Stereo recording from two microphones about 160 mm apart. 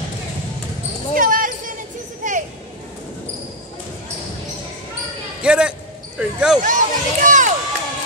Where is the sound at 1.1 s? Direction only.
60° right (ahead or behind).